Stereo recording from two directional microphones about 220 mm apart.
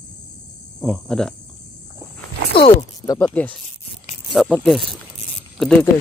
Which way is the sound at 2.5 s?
25° left (ahead or behind).